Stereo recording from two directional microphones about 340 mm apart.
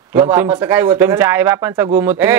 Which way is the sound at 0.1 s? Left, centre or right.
Centre.